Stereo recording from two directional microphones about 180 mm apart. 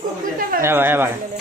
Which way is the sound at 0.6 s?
10° right (ahead or behind).